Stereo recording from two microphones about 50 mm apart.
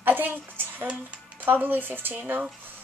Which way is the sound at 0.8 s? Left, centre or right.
Right.